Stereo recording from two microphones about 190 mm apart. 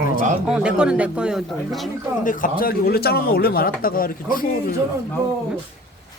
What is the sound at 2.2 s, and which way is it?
Speech, 45° left (ahead or behind).